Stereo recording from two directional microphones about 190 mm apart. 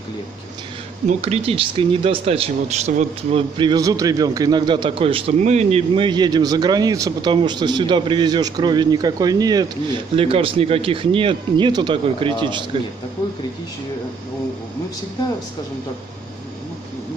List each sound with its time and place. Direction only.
1.0 s speech: 35° right (ahead or behind)